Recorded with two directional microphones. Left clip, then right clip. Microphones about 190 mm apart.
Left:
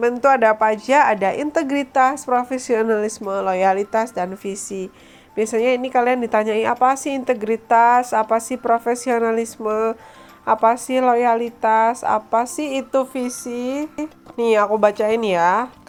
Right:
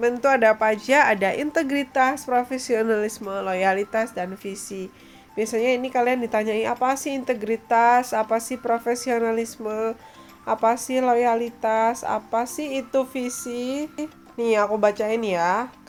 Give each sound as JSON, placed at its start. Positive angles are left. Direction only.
{"t": 0.0, "sound": "speech", "side_deg": 15}
{"t": 14.3, "sound": "speech", "side_deg": 20}